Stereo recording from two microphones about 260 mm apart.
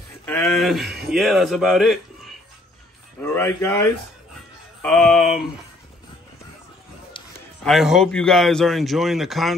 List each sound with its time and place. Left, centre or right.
0.2 s a man's voice: centre
7.2 s a sound: centre
7.6 s speech: centre